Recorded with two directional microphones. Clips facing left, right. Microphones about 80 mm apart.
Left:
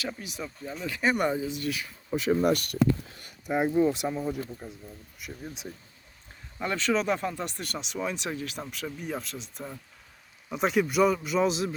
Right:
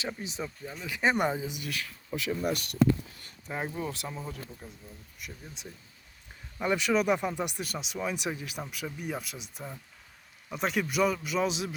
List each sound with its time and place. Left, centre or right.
0.2 s speech: right
1.8 s speech: centre
2.3 s speech: left
3.4 s speech: centre
5.2 s a man's voice: centre
6.6 s a man's voice: centre